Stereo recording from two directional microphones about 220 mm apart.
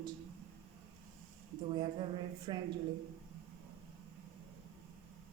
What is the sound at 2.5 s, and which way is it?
Speech, 20° right (ahead or behind).